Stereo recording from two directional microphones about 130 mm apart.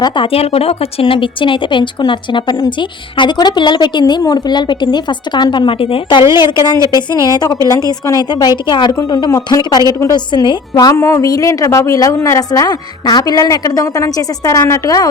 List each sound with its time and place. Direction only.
0.0 s speech: 45° left (ahead or behind)
6.7 s a woman's voice: 25° right (ahead or behind)
7.1 s a woman's voice: 30° left (ahead or behind)